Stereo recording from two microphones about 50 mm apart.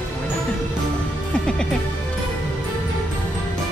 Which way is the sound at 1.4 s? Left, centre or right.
Centre.